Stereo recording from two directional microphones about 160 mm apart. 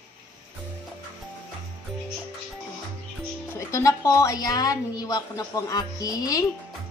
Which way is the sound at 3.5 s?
20° left (ahead or behind).